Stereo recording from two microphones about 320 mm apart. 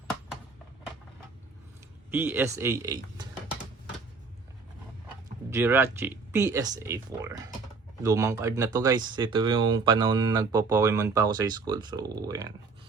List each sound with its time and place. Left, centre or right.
2.0 s speech: centre
5.5 s speech: centre